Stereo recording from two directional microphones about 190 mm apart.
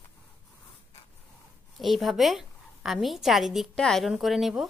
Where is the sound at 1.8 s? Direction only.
Centre (ahead or behind).